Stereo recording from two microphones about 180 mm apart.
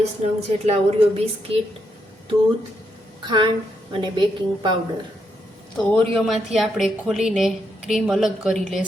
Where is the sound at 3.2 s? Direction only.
25° right (ahead or behind).